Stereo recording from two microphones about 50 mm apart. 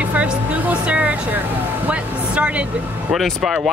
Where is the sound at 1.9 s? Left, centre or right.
Right.